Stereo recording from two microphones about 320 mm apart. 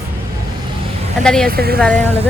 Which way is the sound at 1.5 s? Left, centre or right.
Right.